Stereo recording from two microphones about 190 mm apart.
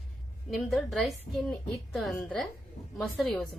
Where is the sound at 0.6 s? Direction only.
Centre (ahead or behind).